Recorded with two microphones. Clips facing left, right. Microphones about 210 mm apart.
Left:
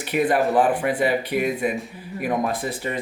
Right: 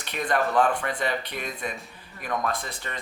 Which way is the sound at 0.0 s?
5° left (ahead or behind).